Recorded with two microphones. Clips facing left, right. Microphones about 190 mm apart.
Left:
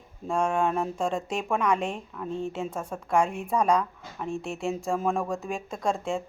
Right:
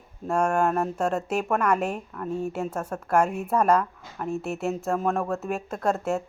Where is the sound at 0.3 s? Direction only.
5° right (ahead or behind).